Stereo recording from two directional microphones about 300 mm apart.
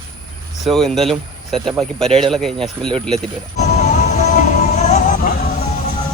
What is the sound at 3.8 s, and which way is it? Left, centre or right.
Music, left.